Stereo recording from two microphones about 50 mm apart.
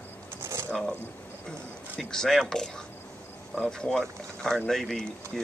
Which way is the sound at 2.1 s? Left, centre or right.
Centre.